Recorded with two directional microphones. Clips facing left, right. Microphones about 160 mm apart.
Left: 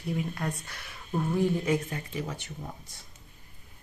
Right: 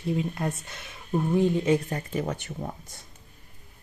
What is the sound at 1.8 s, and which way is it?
Speech, 40° right (ahead or behind).